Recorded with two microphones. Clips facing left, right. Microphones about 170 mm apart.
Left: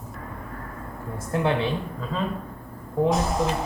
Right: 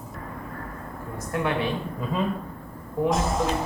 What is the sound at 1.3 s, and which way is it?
Speech, 25° left (ahead or behind).